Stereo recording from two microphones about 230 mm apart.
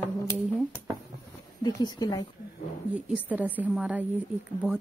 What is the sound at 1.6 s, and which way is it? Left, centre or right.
Speech, centre.